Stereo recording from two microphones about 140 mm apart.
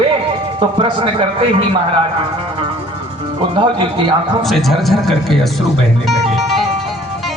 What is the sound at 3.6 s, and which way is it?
Speech, 35° right (ahead or behind).